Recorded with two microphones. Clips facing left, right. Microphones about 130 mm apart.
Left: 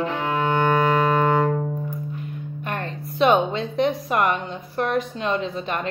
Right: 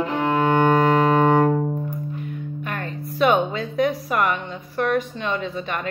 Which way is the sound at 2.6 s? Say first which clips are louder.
Left 2 dB; 30° left (ahead or behind).